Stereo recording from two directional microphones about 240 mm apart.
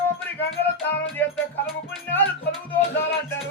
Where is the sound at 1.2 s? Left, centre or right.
Centre.